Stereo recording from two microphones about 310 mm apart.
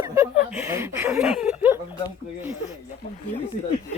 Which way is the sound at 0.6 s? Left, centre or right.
Centre.